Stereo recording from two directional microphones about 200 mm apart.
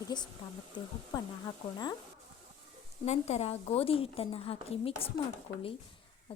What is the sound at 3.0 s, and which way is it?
A child's voice, 30° left (ahead or behind).